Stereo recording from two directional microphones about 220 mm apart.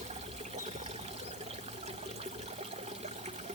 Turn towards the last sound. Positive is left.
turn(degrees=-30)  # may be behind; listen again after turning